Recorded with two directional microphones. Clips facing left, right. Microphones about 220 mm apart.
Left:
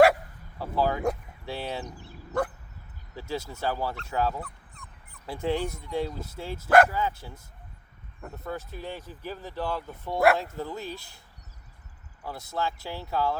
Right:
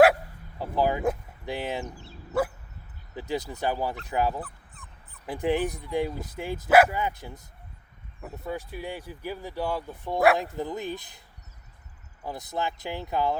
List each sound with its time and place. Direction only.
0.6 s a sound: 15° right (ahead or behind)
1.5 s speech: 15° right (ahead or behind)
3.2 s speech: 15° right (ahead or behind)
4.4 s dog: 5° right (ahead or behind)
5.2 s speech: 15° right (ahead or behind)
12.2 s speech: 15° right (ahead or behind)